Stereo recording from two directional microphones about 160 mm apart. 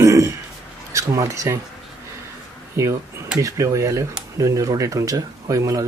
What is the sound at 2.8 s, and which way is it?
Speech, 20° right (ahead or behind).